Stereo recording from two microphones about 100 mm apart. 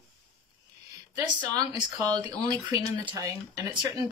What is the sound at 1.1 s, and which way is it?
Speech, 45° right (ahead or behind).